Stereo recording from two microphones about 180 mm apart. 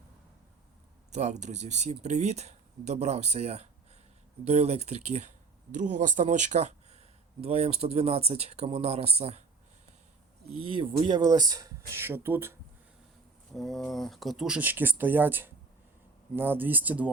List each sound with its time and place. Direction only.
1.1 s speech: 40° right (ahead or behind)
10.5 s speech: 30° right (ahead or behind); by 12.5 s 15° right (ahead or behind)
13.5 s speech: centre (ahead or behind)